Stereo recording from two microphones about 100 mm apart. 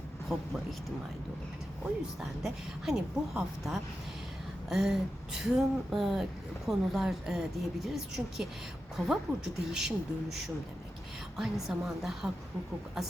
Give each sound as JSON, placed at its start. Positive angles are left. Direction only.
{"t": 0.3, "sound": "a woman's voice", "side_deg": 0}
{"t": 2.4, "sound": "a woman's voice", "side_deg": -5}
{"t": 11.3, "sound": "a woman's voice", "side_deg": -5}